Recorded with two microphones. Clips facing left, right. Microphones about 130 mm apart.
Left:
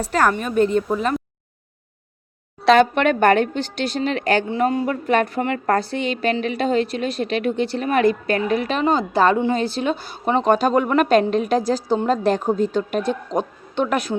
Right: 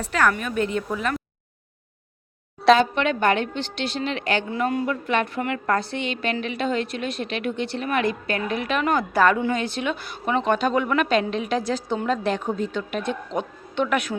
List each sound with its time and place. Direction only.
0.0 s a woman's voice: 40° left (ahead or behind)
2.7 s a woman's voice: 55° left (ahead or behind)
4.4 s a woman's voice: 30° left (ahead or behind)